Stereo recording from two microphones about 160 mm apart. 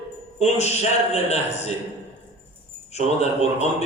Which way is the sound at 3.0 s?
45° left (ahead or behind).